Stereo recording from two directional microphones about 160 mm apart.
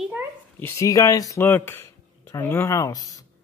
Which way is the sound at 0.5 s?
15° left (ahead or behind).